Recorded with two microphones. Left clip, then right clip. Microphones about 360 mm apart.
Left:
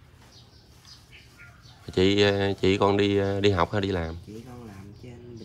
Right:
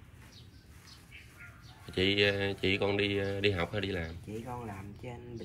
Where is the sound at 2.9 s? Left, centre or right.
Left.